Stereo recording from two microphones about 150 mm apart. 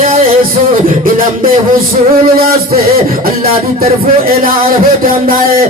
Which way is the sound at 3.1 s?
75° right (ahead or behind).